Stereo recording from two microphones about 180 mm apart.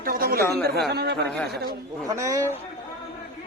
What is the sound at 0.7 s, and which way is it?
Speech, 65° right (ahead or behind).